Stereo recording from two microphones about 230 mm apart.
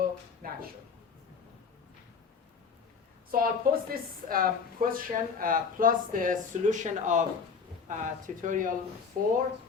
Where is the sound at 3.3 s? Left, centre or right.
Right.